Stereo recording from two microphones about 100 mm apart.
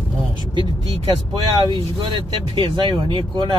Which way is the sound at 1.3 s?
55° right (ahead or behind).